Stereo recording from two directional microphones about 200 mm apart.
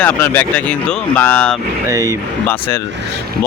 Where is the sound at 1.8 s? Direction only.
15° right (ahead or behind).